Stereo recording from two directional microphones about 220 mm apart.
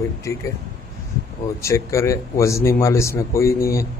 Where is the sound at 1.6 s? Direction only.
15° left (ahead or behind).